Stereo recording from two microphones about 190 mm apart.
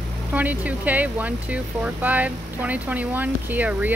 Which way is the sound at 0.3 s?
10° right (ahead or behind).